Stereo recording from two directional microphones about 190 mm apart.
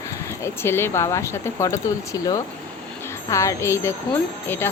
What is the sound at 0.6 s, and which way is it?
Speech, 10° left (ahead or behind).